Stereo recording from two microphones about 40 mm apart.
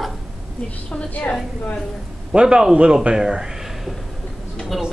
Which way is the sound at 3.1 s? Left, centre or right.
Centre.